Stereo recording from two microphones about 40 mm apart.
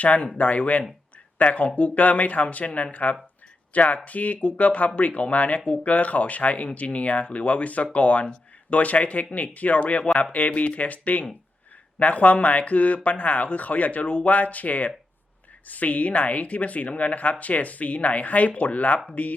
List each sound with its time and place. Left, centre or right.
0.0 s a woman's voice: left